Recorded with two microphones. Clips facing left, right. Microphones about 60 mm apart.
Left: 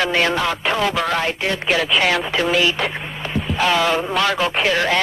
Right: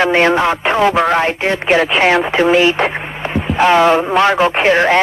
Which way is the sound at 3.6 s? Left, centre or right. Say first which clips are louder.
Right 8 dB; right.